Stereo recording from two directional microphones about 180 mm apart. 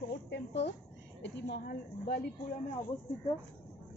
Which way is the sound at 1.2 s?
65° left (ahead or behind).